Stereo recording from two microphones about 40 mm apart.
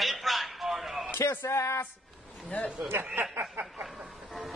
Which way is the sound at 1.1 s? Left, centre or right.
Left.